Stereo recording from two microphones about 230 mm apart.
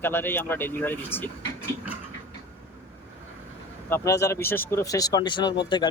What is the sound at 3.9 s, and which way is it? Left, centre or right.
Speech, centre.